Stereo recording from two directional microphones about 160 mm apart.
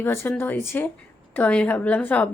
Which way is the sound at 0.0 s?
15° left (ahead or behind).